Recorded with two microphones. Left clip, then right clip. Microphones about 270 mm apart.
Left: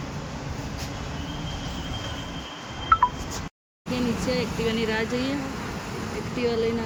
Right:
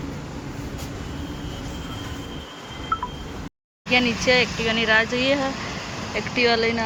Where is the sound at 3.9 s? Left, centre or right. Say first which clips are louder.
Right 9 dB; centre.